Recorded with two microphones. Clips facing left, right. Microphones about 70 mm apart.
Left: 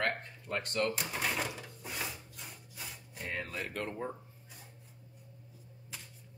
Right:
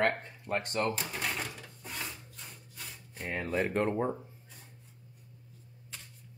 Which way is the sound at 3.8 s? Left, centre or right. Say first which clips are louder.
Right 8 dB; right.